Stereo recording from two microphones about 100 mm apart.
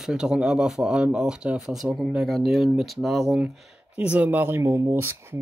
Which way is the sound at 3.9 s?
15° right (ahead or behind).